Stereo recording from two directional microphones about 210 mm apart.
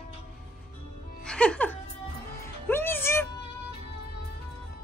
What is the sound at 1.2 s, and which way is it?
Music, 5° left (ahead or behind).